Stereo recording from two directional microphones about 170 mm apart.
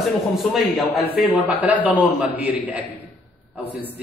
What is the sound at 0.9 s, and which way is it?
Speech, 65° left (ahead or behind).